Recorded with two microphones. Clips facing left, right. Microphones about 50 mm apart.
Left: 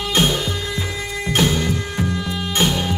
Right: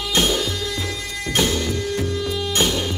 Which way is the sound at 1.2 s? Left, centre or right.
Centre.